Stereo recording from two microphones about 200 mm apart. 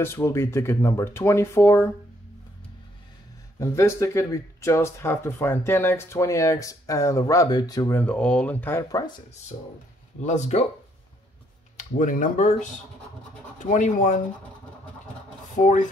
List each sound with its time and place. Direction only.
0.0 s speech: 15° left (ahead or behind)
3.5 s speech: 15° left (ahead or behind)
10.2 s speech: 35° left (ahead or behind)
11.7 s speech: 40° left (ahead or behind)
15.5 s speech: 40° left (ahead or behind)